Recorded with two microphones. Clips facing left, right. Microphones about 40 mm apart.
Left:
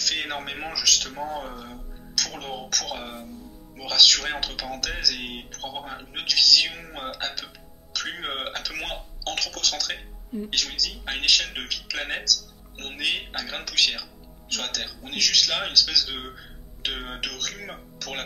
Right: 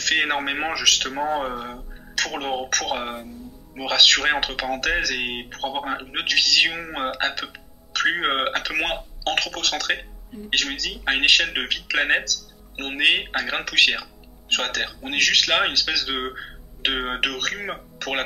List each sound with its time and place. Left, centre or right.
0.0 s speech: right